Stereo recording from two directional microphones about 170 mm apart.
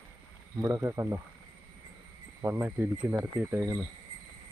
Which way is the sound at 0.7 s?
15° right (ahead or behind).